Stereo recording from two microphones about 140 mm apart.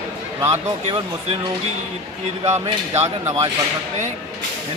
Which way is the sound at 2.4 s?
50° right (ahead or behind).